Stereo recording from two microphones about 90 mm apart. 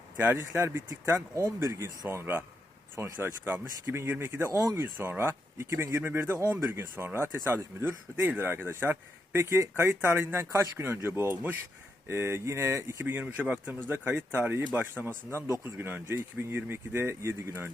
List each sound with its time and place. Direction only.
0.2 s speech: 25° right (ahead or behind)